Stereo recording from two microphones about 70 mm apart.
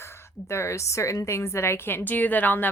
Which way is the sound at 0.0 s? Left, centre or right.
Left.